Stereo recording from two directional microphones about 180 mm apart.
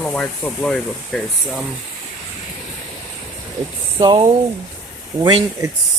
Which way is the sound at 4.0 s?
25° right (ahead or behind).